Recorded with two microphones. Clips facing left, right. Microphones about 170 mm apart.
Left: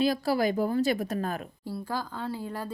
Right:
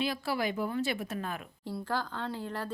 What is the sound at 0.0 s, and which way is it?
A woman's voice, 40° left (ahead or behind).